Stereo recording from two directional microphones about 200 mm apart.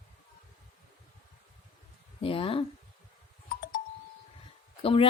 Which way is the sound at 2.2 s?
25° left (ahead or behind).